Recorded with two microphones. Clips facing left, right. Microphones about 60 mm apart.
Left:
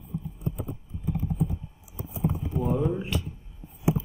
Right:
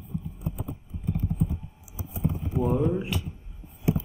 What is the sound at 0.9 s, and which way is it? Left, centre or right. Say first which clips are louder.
Typing: left 1 dB; right.